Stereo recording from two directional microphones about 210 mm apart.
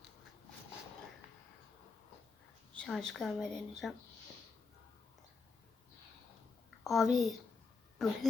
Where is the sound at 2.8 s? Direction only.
Centre (ahead or behind).